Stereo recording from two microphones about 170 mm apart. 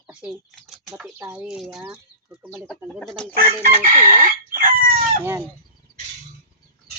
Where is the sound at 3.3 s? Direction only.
45° right (ahead or behind).